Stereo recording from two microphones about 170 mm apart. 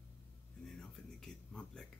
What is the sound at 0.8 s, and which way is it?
Speech, 5° left (ahead or behind).